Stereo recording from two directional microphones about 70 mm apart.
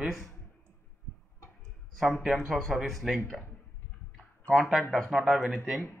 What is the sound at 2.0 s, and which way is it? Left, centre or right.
Speech, centre.